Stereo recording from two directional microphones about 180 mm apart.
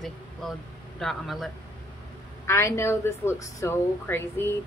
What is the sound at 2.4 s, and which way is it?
A woman's voice, 15° left (ahead or behind).